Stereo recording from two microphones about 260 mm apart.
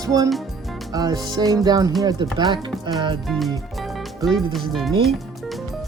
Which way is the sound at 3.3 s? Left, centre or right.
Centre.